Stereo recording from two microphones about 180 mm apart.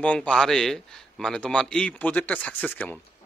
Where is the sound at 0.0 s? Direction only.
5° left (ahead or behind).